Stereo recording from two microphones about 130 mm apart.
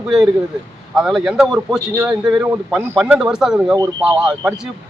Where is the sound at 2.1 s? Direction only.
5° right (ahead or behind).